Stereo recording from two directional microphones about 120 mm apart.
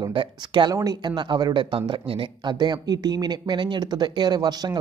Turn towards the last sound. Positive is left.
turn(degrees=-35)  # may be behind; listen again after turning